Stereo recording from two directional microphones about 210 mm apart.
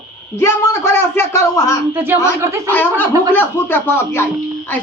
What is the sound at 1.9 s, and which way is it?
Speech, 10° right (ahead or behind).